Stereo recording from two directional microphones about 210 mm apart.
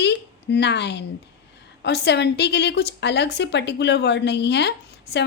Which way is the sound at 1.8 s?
55° left (ahead or behind).